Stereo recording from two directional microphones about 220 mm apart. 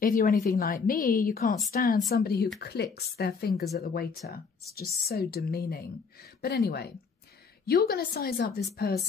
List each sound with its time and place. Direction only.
0.0 s speech: 40° left (ahead or behind)
5.3 s speech: 45° left (ahead or behind)